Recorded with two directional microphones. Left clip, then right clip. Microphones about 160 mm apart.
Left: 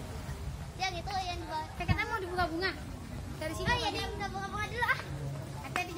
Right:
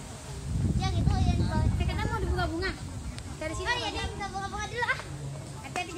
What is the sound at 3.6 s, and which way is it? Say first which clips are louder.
Children playing: right 1 dB; 30° right (ahead or behind).